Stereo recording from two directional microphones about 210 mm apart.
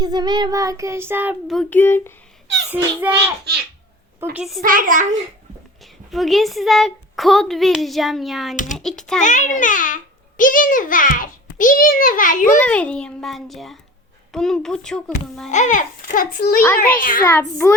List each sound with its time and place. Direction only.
0.0 s child singing: 20° right (ahead or behind); by 2.1 s 10° left (ahead or behind)
2.7 s child singing: 10° right (ahead or behind)
4.2 s a woman's voice: 5° right (ahead or behind)
4.6 s a child's voice: 40° right (ahead or behind)
6.1 s a woman's voice: centre (ahead or behind)
8.5 s a child's voice: 35° left (ahead or behind)
8.8 s a woman's voice: centre (ahead or behind)
9.2 s a child's voice: 35° left (ahead or behind)
12.5 s a woman's voice: 5° left (ahead or behind)
15.4 s a child's voice: 35° left (ahead or behind)
17.6 s child singing: 10° left (ahead or behind)